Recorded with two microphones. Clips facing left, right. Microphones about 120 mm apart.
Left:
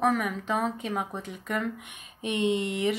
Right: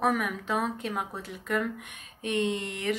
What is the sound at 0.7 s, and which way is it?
Speech, centre (ahead or behind).